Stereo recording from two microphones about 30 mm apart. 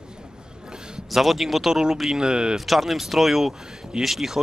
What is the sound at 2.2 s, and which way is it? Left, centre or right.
Speech, right.